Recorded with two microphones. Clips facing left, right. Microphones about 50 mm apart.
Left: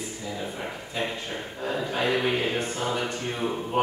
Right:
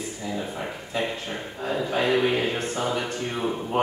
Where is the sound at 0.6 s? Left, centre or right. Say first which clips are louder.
Right 1 dB; centre.